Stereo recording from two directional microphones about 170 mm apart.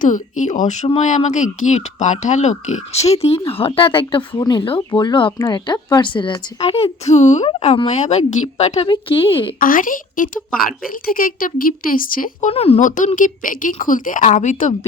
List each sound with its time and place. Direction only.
0.0 s speech: 50° left (ahead or behind); by 9.5 s 30° left (ahead or behind)
9.6 s a woman's voice: 55° left (ahead or behind)
12.5 s a woman's voice: 35° left (ahead or behind)